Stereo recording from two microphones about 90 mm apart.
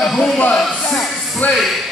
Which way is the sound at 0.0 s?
5° left (ahead or behind).